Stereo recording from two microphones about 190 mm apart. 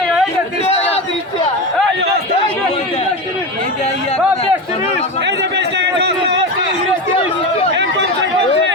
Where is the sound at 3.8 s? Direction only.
30° left (ahead or behind).